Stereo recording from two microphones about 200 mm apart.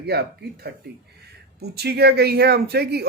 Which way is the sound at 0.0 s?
55° right (ahead or behind).